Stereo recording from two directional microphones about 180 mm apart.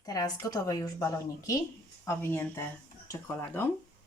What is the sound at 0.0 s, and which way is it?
A woman's voice, 20° left (ahead or behind).